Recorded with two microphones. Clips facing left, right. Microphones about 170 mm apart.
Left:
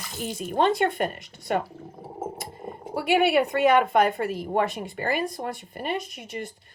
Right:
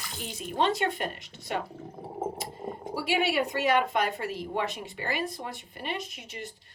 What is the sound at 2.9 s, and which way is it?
A woman's voice, 55° left (ahead or behind).